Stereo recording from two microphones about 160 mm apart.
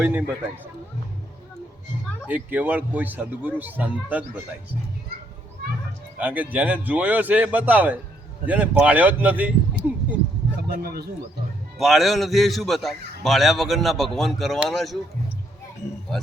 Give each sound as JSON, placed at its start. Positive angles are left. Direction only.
{"t": 0.0, "sound": "speech", "side_deg": -10}
{"t": 2.2, "sound": "speech", "side_deg": -10}
{"t": 6.1, "sound": "speech", "side_deg": -10}
{"t": 10.8, "sound": "speech", "side_deg": -70}
{"t": 11.8, "sound": "a man's voice", "side_deg": 0}